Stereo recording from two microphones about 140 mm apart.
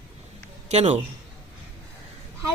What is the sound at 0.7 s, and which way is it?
Speech, 50° right (ahead or behind).